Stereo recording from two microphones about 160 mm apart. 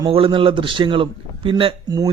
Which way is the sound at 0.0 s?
30° right (ahead or behind).